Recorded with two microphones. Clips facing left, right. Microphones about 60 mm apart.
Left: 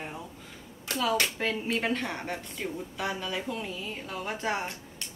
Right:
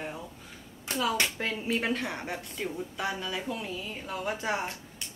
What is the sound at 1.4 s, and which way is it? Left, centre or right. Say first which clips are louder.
A woman's voice: left 1 dB; centre.